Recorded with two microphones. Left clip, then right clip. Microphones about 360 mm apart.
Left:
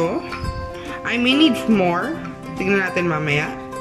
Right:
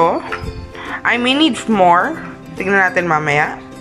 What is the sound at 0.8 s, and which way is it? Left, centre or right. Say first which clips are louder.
A woman's voice: right 5 dB; centre.